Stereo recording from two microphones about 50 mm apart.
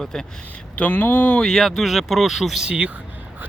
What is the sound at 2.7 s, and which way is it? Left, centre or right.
Speech, right.